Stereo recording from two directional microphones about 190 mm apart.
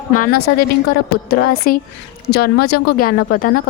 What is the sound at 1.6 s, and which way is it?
A woman's voice, 50° left (ahead or behind).